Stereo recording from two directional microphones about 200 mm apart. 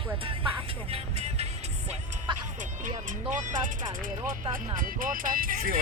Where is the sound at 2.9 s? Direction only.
40° right (ahead or behind).